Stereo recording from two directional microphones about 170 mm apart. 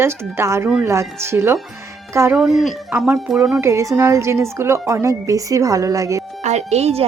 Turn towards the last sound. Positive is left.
turn(degrees=-35)  # may be behind; listen again after turning